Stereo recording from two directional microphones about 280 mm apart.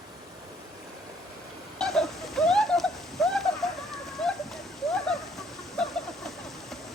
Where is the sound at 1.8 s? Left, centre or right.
Centre.